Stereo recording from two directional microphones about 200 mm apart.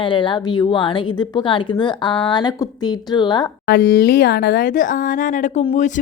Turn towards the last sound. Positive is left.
turn(degrees=35)  # may be behind; listen again after turning